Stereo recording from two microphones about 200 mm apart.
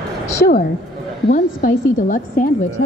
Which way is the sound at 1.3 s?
40° left (ahead or behind).